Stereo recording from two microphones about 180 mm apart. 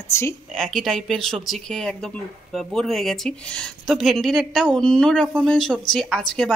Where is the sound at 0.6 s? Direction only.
Centre (ahead or behind).